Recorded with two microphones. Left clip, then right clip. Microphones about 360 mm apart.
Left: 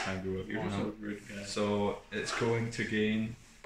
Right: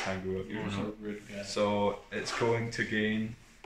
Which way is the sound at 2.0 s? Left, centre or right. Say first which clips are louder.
Right 2 dB; centre.